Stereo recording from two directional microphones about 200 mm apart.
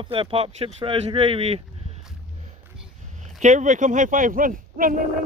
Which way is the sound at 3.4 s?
40° right (ahead or behind).